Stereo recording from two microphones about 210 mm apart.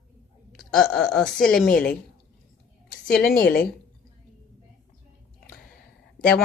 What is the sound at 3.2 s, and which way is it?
Speech, 45° left (ahead or behind).